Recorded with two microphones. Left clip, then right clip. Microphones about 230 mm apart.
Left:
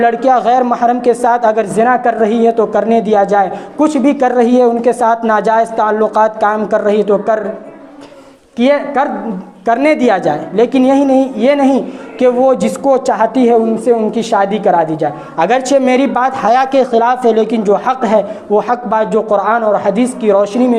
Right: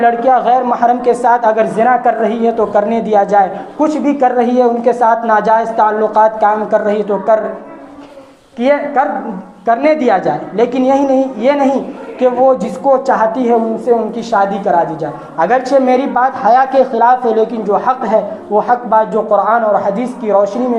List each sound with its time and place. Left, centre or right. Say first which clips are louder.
0.0 s a woman's voice: even; left
8.5 s a woman's voice: even; left